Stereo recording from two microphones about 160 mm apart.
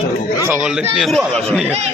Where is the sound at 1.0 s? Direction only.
Centre (ahead or behind).